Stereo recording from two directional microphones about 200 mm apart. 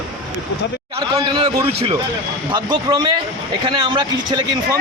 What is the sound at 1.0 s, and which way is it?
Speech, 25° right (ahead or behind).